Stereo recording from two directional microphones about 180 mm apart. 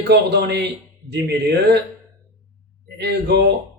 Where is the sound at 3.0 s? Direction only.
75° right (ahead or behind).